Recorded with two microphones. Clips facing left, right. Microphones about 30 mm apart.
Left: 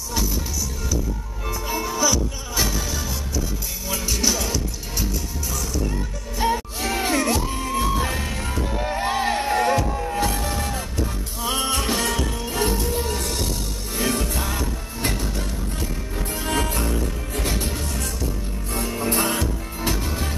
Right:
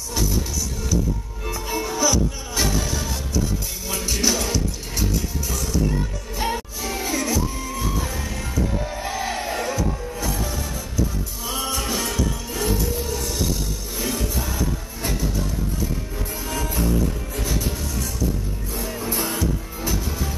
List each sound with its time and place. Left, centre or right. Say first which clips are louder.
1.4 s music: left 1 dB; centre
6.3 s music: left 3 dB; centre
6.8 s music: left 3 dB; left
9.9 s music: left 6 dB; left
10.2 s music: left 3 dB; left
16.4 s music: left 1 dB; left
19.0 s music: left 2 dB; left